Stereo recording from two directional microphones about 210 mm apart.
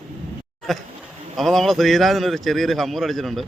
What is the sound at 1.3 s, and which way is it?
A man's voice, centre (ahead or behind).